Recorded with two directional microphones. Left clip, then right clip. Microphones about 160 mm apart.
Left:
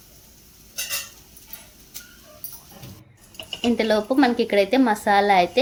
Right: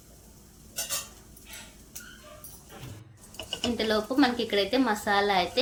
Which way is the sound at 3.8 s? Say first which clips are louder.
Left 6 dB; 35° left (ahead or behind).